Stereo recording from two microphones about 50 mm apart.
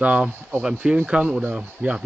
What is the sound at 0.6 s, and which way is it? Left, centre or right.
Speech, centre.